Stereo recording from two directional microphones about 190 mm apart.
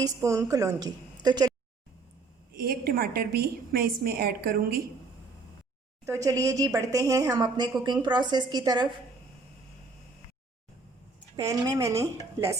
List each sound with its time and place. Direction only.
0.0 s a woman's voice: 15° right (ahead or behind)
2.5 s a woman's voice: 50° right (ahead or behind)
6.1 s a woman's voice: 15° right (ahead or behind)
11.3 s a woman's voice: 15° right (ahead or behind)